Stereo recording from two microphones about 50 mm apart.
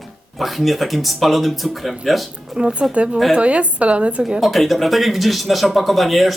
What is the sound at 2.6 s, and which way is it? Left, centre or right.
A woman's voice, centre.